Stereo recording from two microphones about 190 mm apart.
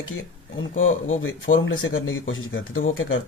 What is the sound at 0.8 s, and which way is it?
Speech, 90° left.